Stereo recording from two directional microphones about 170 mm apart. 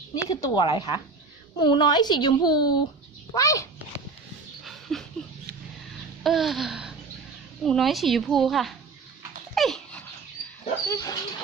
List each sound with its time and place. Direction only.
0.1 s a woman's voice: 20° left (ahead or behind)
4.6 s a sound: centre (ahead or behind)
6.2 s a sound: centre (ahead or behind)
7.6 s speech: centre (ahead or behind)
9.6 s dog: centre (ahead or behind)
10.9 s speech: 20° left (ahead or behind)